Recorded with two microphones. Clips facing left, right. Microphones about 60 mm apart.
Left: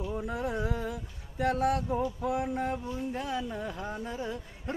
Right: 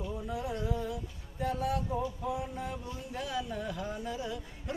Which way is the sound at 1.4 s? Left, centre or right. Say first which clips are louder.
Left 5 dB; left.